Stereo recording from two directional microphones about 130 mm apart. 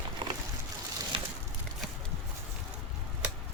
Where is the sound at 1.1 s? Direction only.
40° right (ahead or behind).